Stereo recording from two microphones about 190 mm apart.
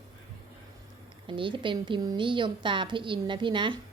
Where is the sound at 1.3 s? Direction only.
25° right (ahead or behind).